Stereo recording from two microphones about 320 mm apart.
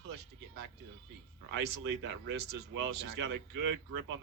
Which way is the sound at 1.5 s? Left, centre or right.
Right.